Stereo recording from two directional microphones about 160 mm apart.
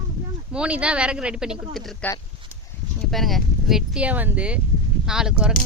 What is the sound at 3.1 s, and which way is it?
Speech, centre (ahead or behind).